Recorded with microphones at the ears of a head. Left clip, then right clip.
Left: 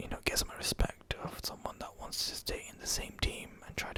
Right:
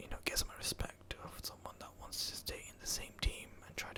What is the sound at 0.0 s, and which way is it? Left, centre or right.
Whispering, left.